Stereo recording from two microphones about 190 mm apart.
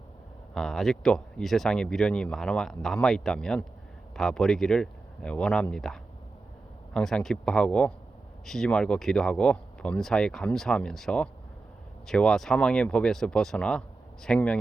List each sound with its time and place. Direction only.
0.5 s speech: centre (ahead or behind)